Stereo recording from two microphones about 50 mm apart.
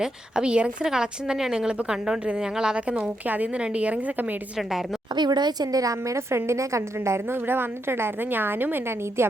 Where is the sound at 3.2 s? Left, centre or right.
Right.